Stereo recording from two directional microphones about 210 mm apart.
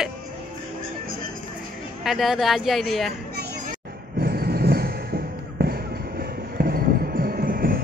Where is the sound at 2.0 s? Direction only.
Centre (ahead or behind).